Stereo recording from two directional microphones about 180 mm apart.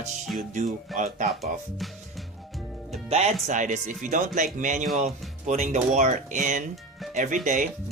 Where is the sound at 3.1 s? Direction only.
40° right (ahead or behind).